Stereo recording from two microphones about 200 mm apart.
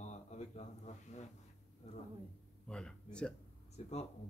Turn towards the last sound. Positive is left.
turn(degrees=35)  # may be behind; listen again after turning